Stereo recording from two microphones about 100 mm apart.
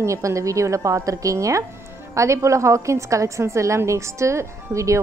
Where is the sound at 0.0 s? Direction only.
30° right (ahead or behind).